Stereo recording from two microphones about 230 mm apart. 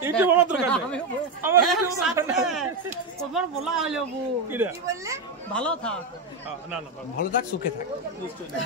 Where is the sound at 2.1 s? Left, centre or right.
Centre.